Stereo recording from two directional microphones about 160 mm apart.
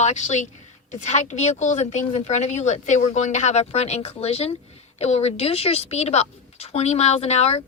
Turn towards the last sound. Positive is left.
turn(degrees=40)  # may be behind; listen again after turning